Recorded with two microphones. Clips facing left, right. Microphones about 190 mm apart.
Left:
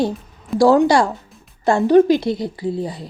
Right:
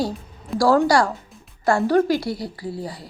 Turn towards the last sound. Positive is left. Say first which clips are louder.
# left 7 dB
turn(degrees=20)  # may be behind; listen again after turning